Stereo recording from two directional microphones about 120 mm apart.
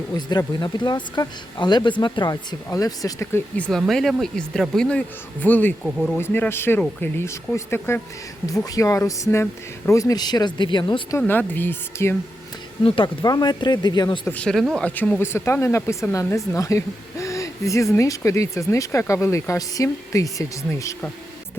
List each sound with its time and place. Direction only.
0.1 s speech: 35° left (ahead or behind)
3.6 s speech: 5° left (ahead or behind)
5.8 s speech: centre (ahead or behind)
6.1 s speech: 20° left (ahead or behind); by 11.0 s 40° left (ahead or behind)
11.3 s speech: 15° left (ahead or behind)
13.2 s speech: 35° left (ahead or behind)
14.3 s speech: 10° left (ahead or behind)
14.5 s speech: 10° right (ahead or behind)
14.8 s speech: 10° left (ahead or behind)
15.2 s speech: 20° left (ahead or behind)